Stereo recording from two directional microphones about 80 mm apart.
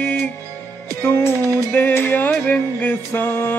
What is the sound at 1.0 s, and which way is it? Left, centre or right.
Music, left.